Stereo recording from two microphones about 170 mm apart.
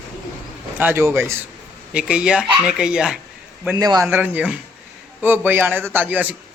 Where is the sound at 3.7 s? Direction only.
20° right (ahead or behind).